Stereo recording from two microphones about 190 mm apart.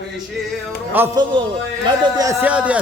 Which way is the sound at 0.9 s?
10° right (ahead or behind).